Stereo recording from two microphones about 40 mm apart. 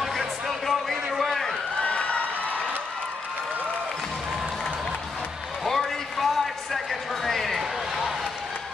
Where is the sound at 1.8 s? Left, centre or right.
Left.